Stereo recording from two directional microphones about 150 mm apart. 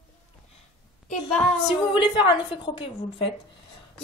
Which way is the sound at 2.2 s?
30° left (ahead or behind).